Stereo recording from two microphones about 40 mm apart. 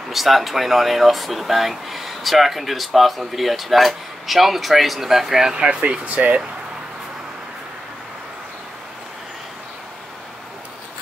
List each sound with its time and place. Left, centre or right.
0.1 s speech: centre
5.5 s speech: right
5.8 s speech: right